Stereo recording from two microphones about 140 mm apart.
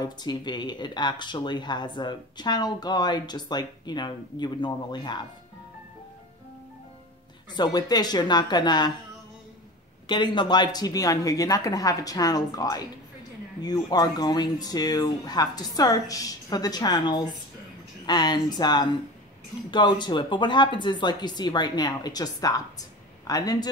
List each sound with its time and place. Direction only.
0.0 s speech: 30° left (ahead or behind)
7.5 s speech: 30° left (ahead or behind)
10.0 s speech: 30° left (ahead or behind)